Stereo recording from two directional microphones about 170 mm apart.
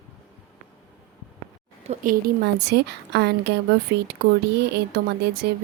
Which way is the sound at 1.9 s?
60° right (ahead or behind).